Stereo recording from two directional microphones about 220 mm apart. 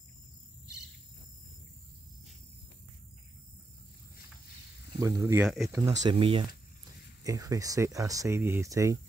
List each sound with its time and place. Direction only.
5.0 s speech: 10° right (ahead or behind)
6.1 s speech: 25° right (ahead or behind)